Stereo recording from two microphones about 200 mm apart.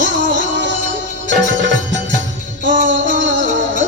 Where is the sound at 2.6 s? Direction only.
65° right (ahead or behind).